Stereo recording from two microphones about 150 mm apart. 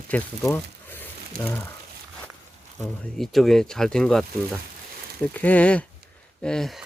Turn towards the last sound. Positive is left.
turn(degrees=0)  # may be behind; listen again after turning